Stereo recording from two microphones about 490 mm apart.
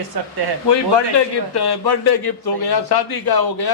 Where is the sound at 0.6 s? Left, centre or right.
Left.